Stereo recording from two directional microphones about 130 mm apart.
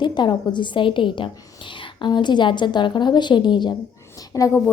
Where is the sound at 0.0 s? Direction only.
35° left (ahead or behind).